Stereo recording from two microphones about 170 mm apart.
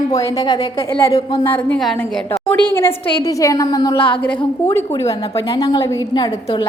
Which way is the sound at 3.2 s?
20° left (ahead or behind).